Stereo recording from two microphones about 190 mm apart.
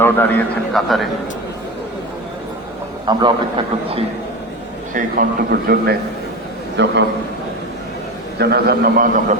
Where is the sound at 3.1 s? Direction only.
25° right (ahead or behind).